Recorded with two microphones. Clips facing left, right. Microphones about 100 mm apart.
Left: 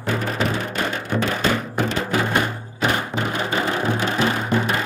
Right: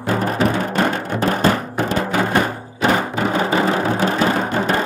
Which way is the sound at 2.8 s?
30° right (ahead or behind).